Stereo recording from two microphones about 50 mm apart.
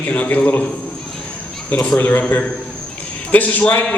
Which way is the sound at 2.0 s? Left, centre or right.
Left.